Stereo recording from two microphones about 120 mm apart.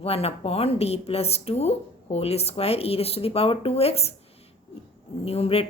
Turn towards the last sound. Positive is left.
turn(degrees=55)  # may be behind; listen again after turning